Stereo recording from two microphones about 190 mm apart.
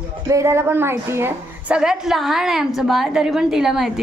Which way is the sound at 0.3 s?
15° right (ahead or behind).